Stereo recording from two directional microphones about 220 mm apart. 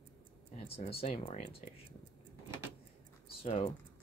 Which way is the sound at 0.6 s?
25° left (ahead or behind).